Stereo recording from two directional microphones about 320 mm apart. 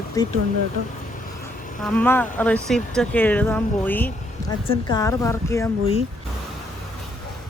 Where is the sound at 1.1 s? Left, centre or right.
Left.